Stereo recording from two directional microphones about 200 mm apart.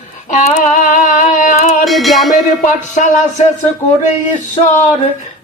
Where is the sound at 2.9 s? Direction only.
35° left (ahead or behind).